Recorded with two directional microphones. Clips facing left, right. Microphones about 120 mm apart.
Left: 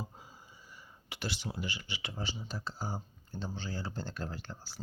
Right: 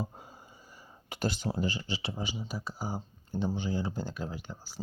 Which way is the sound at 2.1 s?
10° right (ahead or behind).